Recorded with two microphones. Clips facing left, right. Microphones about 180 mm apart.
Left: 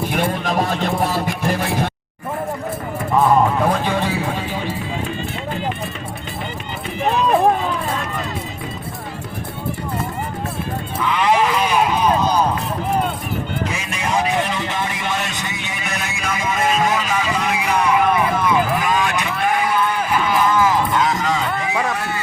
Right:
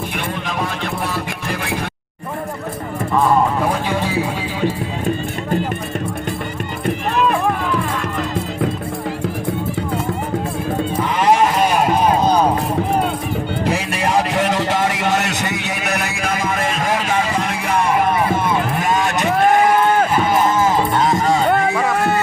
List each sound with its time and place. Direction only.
0.4 s speech: 40° left (ahead or behind)
11.0 s sheep: 45° right (ahead or behind)
13.7 s music: 60° right (ahead or behind)
18.8 s a sound: 45° right (ahead or behind)
20.5 s music: 25° right (ahead or behind)
21.2 s music: 45° right (ahead or behind)